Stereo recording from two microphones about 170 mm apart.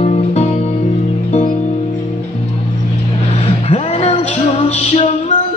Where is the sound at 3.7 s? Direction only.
40° left (ahead or behind).